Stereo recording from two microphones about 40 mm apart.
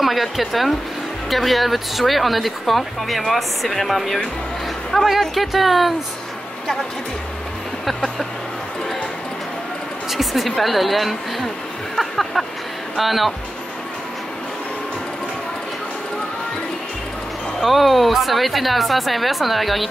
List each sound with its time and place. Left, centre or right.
0.0 s speech: centre
7.8 s speech: centre
10.1 s speech: centre
17.6 s speech: centre